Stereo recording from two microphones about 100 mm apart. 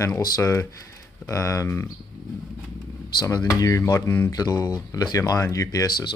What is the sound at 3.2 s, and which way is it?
Speech, 40° left (ahead or behind).